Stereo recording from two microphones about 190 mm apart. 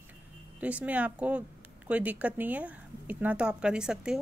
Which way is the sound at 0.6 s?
5° right (ahead or behind).